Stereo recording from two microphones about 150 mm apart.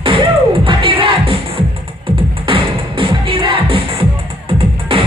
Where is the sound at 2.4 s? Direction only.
35° right (ahead or behind).